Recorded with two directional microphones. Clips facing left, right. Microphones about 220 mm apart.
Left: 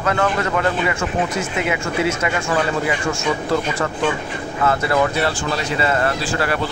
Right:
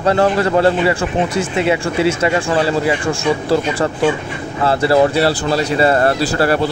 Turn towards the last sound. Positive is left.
turn(degrees=-35)  # may be behind; listen again after turning